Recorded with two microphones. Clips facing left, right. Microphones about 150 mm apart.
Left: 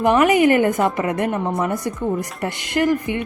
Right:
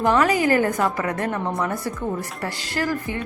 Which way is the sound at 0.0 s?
20° left (ahead or behind).